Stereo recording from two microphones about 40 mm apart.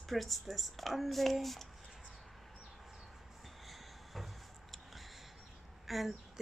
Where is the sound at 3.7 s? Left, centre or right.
Centre.